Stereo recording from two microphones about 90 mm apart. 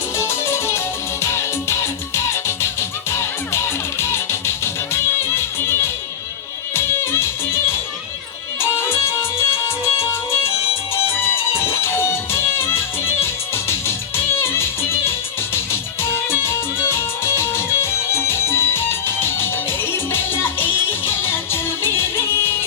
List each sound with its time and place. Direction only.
0.2 s music: 30° left (ahead or behind)